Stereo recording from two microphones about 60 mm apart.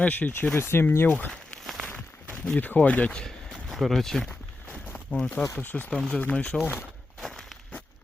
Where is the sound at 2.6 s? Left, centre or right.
Left.